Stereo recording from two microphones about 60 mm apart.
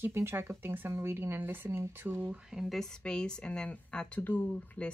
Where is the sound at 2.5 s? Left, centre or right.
Centre.